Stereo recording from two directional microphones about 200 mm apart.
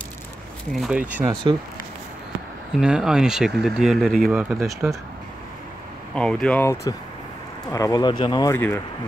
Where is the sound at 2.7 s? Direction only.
5° right (ahead or behind).